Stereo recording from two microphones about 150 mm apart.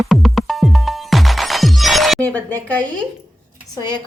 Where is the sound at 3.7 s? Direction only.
30° left (ahead or behind).